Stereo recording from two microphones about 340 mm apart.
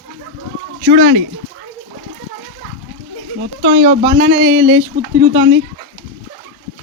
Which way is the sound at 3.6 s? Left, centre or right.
Right.